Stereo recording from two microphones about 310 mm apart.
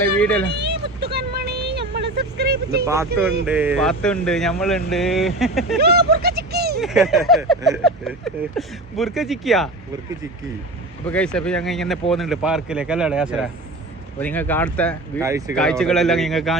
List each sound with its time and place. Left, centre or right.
0.2 s speech: centre
0.4 s a sound: right
2.0 s speech: right
2.8 s speech: centre
5.8 s a sound: right
6.7 s speech: centre
11.0 s speech: centre
15.2 s speech: centre
15.5 s speech: centre